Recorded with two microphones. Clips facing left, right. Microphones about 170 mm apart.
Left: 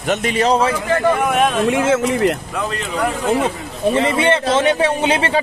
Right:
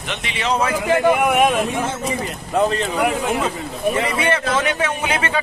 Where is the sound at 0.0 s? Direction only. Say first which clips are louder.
Left 9 dB; 45° left (ahead or behind).